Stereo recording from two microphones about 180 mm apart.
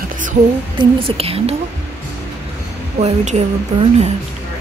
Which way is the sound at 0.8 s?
30° right (ahead or behind).